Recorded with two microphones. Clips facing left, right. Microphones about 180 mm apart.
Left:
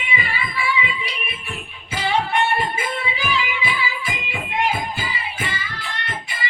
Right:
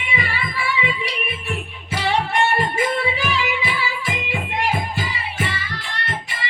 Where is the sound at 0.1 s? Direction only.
75° right (ahead or behind).